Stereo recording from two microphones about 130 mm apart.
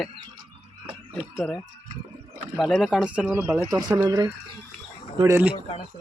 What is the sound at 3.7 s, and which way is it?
Speech, 30° right (ahead or behind).